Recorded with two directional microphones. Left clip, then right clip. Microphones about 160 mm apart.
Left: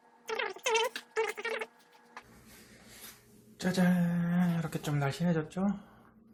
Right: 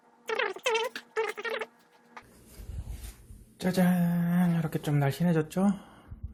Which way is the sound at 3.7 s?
50° right (ahead or behind).